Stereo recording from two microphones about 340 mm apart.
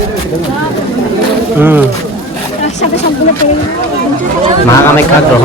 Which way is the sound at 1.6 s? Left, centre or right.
Centre.